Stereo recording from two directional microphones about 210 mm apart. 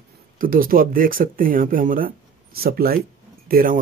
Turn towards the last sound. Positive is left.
turn(degrees=-45)  # may be behind; listen again after turning